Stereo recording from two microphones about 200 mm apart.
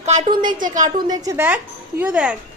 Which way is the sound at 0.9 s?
20° right (ahead or behind).